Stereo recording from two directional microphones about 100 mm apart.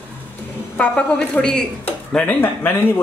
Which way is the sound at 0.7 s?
10° left (ahead or behind).